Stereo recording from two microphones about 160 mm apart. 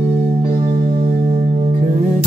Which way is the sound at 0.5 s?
60° right (ahead or behind).